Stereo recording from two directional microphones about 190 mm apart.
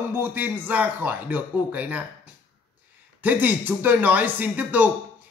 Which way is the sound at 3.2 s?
10° right (ahead or behind).